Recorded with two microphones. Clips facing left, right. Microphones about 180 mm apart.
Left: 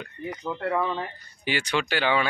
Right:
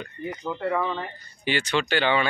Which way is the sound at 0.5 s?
5° left (ahead or behind).